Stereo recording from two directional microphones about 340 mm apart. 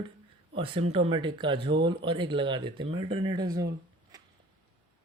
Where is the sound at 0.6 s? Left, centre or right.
Centre.